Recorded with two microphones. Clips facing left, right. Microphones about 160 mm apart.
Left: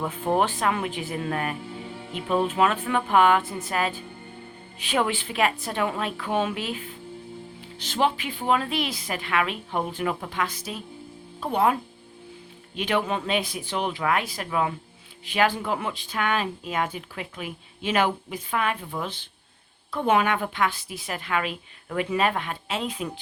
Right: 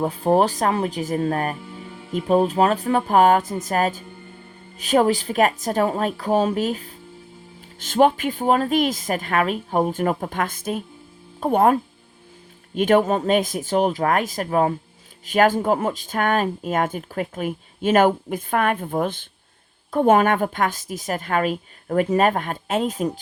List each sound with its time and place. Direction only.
0.0 s a woman's voice: 35° right (ahead or behind)